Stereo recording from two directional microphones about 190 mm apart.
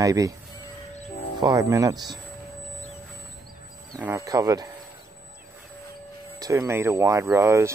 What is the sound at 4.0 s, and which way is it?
Speech, 15° right (ahead or behind).